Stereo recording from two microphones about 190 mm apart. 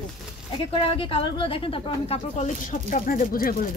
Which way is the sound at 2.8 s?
45° left (ahead or behind).